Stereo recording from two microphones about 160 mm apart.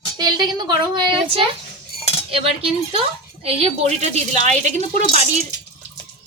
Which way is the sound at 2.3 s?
35° right (ahead or behind).